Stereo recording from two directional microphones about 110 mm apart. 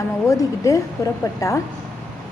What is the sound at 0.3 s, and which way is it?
Speech, 30° left (ahead or behind).